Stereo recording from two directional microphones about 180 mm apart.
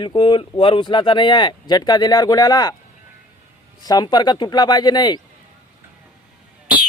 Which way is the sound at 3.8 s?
20° left (ahead or behind).